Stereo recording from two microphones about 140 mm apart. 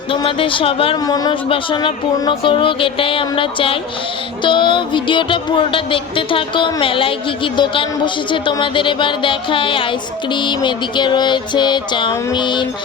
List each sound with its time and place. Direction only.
0.1 s music: 40° left (ahead or behind)
1.0 s speech: 25° left (ahead or behind)
1.5 s music: 35° left (ahead or behind)